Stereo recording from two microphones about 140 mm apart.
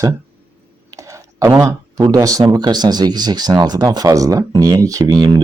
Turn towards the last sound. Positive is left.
turn(degrees=-25)  # may be behind; listen again after turning